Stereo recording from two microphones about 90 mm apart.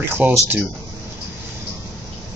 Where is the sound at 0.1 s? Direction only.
25° right (ahead or behind).